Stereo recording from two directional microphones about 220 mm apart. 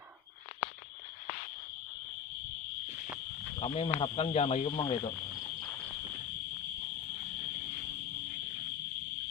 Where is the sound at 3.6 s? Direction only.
25° left (ahead or behind).